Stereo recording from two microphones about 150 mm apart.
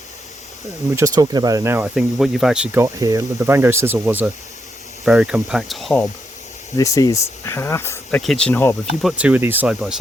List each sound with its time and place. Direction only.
0.9 s speech: 25° right (ahead or behind); by 2.6 s 5° right (ahead or behind)
2.7 s speech: 20° right (ahead or behind); by 6.1 s 5° left (ahead or behind)
6.7 s speech: 20° left (ahead or behind)
8.2 s speech: 5° left (ahead or behind)
9.0 s speech: 5° right (ahead or behind)